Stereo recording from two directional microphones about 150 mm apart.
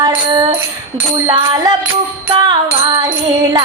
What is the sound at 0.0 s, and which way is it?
Music, 30° right (ahead or behind).